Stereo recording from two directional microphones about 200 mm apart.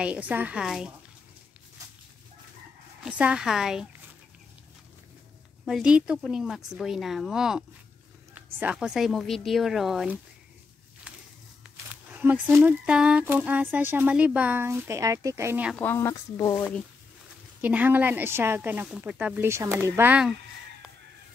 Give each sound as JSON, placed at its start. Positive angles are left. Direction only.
{"t": 0.0, "sound": "speech", "side_deg": -5}
{"t": 3.1, "sound": "speech", "side_deg": -5}
{"t": 5.7, "sound": "speech", "side_deg": -5}
{"t": 11.1, "sound": "a sound", "side_deg": -5}
{"t": 11.6, "sound": "speech", "side_deg": -5}
{"t": 15.7, "sound": "speech", "side_deg": 10}
{"t": 17.6, "sound": "speech", "side_deg": -10}